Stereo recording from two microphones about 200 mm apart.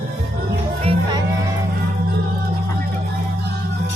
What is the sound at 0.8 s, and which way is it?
Music, 30° right (ahead or behind).